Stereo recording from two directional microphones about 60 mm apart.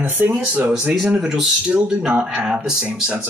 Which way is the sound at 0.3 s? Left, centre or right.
Right.